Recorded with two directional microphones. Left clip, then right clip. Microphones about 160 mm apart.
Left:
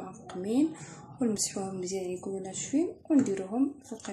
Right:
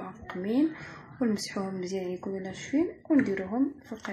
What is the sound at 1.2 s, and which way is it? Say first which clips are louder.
Speech: right 1 dB; centre (ahead or behind).